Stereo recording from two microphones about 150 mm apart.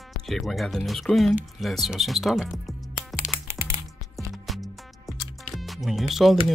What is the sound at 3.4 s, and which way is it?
Music, 20° right (ahead or behind).